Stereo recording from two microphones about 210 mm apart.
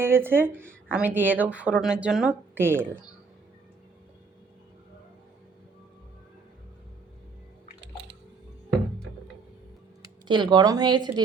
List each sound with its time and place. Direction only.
0.0 s speech: 10° right (ahead or behind)
10.0 s speech: 20° right (ahead or behind)